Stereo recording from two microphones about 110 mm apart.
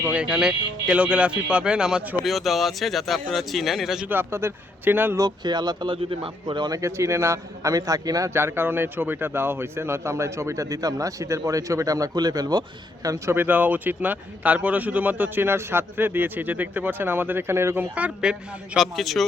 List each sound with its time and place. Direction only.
0.0 s a man's voice: 10° right (ahead or behind)
4.1 s speech: 20° right (ahead or behind)
5.1 s speech: 40° right (ahead or behind)
13.3 s a man's voice: 15° right (ahead or behind)
17.9 s a man's voice: 10° right (ahead or behind)